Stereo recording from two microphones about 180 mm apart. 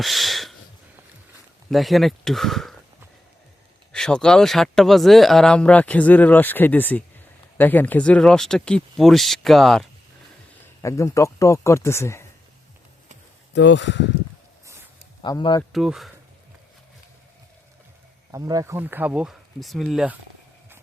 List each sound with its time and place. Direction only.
0.0 s speech: centre (ahead or behind)
1.7 s speech: centre (ahead or behind)
3.9 s speech: 5° left (ahead or behind)
10.8 s speech: 15° left (ahead or behind)
13.5 s speech: 80° left
15.2 s speech: 25° left (ahead or behind)
15.7 s speech: centre (ahead or behind)
18.3 s speech: 20° right (ahead or behind); by 20.1 s centre (ahead or behind)